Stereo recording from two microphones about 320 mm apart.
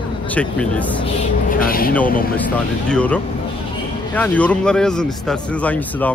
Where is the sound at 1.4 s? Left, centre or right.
Left.